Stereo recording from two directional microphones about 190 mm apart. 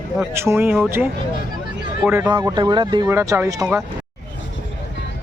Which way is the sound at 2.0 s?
15° right (ahead or behind).